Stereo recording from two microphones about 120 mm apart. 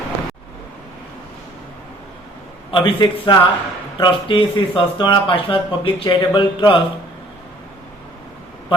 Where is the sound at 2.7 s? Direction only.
45° left (ahead or behind).